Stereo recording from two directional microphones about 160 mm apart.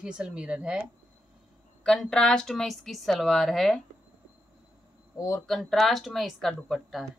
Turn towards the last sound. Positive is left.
turn(degrees=0)  # may be behind; listen again after turning